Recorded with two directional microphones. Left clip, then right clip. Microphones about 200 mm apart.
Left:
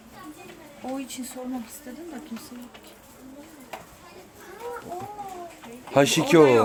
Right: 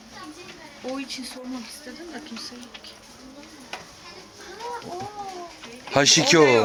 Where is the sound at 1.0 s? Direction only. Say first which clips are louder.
Right 3 dB; 65° left (ahead or behind).